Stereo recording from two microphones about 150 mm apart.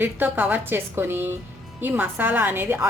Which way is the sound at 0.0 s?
10° right (ahead or behind).